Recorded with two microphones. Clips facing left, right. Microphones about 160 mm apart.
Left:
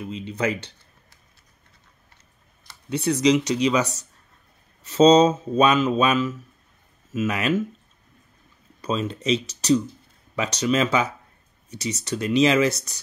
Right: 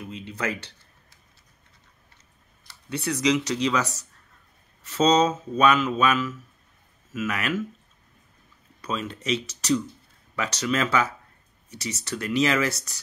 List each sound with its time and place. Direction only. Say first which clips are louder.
0.0 s speech: left 5 dB; 20° left (ahead or behind)
2.9 s speech: left 4 dB; 20° left (ahead or behind)
8.8 s speech: left 5 dB; 25° left (ahead or behind)